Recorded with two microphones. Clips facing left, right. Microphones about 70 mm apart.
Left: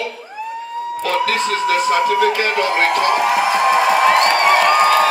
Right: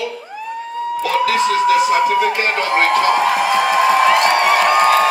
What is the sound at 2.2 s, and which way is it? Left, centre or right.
Speech, right.